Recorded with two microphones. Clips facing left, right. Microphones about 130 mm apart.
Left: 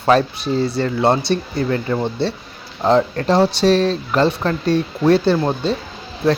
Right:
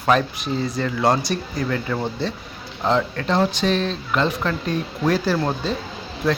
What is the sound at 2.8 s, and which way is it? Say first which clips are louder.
Speech: left 6 dB; 35° left (ahead or behind).